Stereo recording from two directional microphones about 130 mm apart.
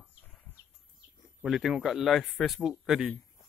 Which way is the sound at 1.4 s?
5° right (ahead or behind).